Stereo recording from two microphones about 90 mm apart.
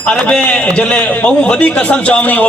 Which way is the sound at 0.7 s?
15° left (ahead or behind).